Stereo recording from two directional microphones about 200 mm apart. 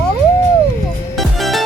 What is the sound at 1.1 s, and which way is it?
Music, centre (ahead or behind).